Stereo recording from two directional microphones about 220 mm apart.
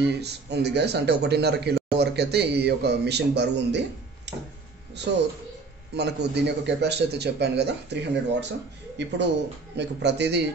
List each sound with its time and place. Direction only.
0.0 s a man's voice: 50° right (ahead or behind)
4.3 s a sound: 50° right (ahead or behind)
5.1 s a man's voice: 50° right (ahead or behind)